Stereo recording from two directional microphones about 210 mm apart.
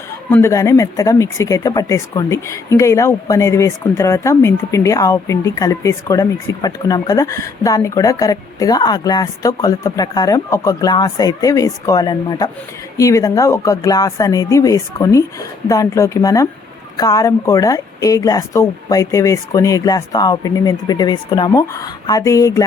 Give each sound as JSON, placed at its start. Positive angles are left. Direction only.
{"t": 0.3, "sound": "speech", "side_deg": 10}